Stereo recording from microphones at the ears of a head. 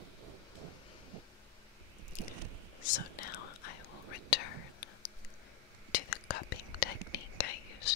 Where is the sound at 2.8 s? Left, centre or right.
Left.